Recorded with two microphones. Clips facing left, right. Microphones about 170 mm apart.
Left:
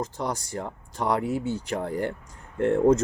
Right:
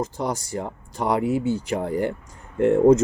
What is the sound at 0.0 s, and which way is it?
Speech, 5° right (ahead or behind).